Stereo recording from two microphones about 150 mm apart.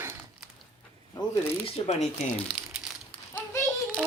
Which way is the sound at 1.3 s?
15° left (ahead or behind).